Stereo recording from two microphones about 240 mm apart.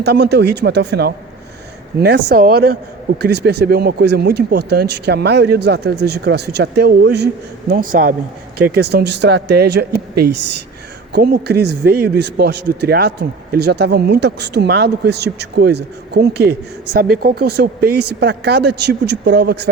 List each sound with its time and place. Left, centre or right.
0.0 s a man's voice: right